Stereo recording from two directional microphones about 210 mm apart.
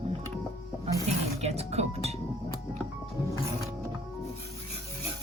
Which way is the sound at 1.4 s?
30° right (ahead or behind).